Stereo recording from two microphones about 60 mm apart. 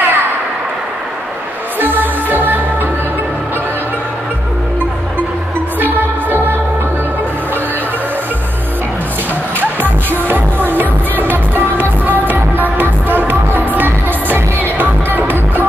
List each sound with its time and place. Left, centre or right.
0.0 s a sound: right
1.8 s music: right
5.8 s music: right
9.6 s music: right